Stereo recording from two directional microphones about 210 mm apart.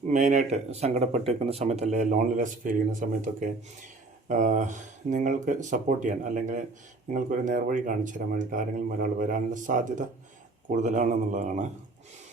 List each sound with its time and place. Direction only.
0.1 s speech: 35° right (ahead or behind)